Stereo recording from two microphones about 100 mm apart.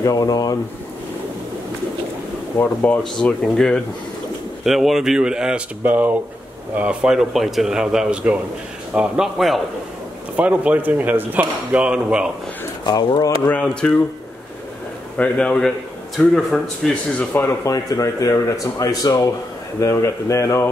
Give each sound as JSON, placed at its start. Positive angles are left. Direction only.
{"t": 0.0, "sound": "speech", "side_deg": 35}
{"t": 2.5, "sound": "speech", "side_deg": 20}
{"t": 3.0, "sound": "a man's voice", "side_deg": 5}
{"t": 10.3, "sound": "a man's voice", "side_deg": -15}
{"t": 12.8, "sound": "speech", "side_deg": 40}
{"t": 13.5, "sound": "a man's voice", "side_deg": 10}
{"t": 15.1, "sound": "a man's voice", "side_deg": 10}
{"t": 17.6, "sound": "speech", "side_deg": 35}